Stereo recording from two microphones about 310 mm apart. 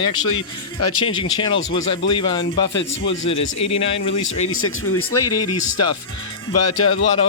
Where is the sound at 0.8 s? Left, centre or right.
Left.